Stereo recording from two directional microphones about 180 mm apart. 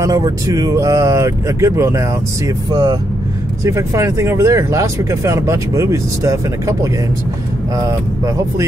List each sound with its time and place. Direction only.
0.0 s speech: 20° right (ahead or behind)